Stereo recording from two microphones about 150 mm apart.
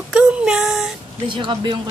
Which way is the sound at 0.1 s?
5° right (ahead or behind).